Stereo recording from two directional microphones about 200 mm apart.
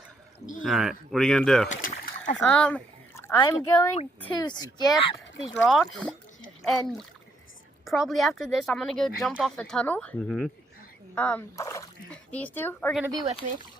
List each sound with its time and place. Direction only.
0.6 s speech: centre (ahead or behind)
1.7 s speech: 35° left (ahead or behind)
2.5 s a sound: 5° left (ahead or behind)
3.3 s a woman's voice: 20° left (ahead or behind)
5.5 s a child's voice: centre (ahead or behind)